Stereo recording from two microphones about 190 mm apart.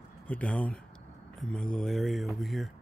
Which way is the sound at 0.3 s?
5° left (ahead or behind).